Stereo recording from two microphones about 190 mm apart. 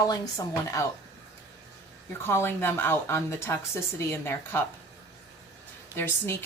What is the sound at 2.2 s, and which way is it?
A woman's voice, 10° left (ahead or behind).